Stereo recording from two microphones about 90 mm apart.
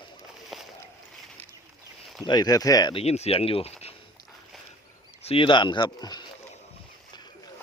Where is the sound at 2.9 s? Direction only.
90° left.